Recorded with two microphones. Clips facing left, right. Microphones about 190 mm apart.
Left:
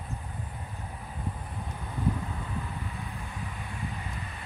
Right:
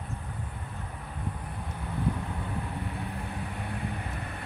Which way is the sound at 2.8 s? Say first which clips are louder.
Right 4 dB; 65° right (ahead or behind).